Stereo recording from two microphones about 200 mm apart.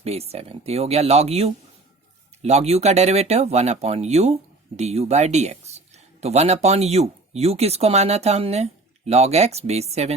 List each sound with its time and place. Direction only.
0.0 s speech: 30° right (ahead or behind)